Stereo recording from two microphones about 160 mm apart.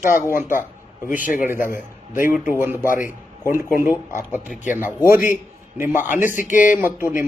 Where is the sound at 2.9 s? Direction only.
55° left (ahead or behind).